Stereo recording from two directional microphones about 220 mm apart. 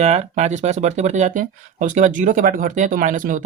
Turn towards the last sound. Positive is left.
turn(degrees=-35)  # may be behind; listen again after turning